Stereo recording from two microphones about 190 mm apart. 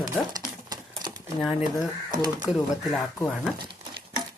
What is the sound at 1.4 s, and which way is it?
Speech, centre (ahead or behind).